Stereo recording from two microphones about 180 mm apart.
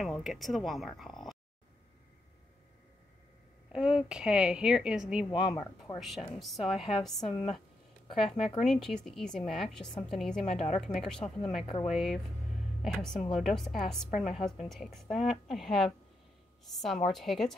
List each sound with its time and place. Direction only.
0.0 s a woman's voice: centre (ahead or behind)
3.7 s a woman's voice: 5° right (ahead or behind)
7.2 s a woman's voice: 30° left (ahead or behind)
8.1 s a woman's voice: centre (ahead or behind)
10.4 s a woman's voice: 35° left (ahead or behind)
10.8 s a woman's voice: centre (ahead or behind)
11.6 s a woman's voice: 30° left (ahead or behind)
11.9 s a woman's voice: centre (ahead or behind)